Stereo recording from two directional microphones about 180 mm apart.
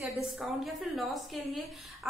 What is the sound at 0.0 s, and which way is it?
A woman's voice, centre (ahead or behind).